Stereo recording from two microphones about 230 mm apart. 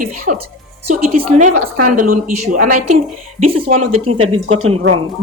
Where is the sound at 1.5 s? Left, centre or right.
Right.